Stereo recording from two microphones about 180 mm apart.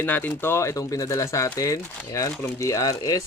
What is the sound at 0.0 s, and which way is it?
Speech, 10° left (ahead or behind).